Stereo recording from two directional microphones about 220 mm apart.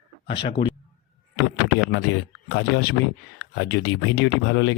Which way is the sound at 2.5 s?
55° left (ahead or behind).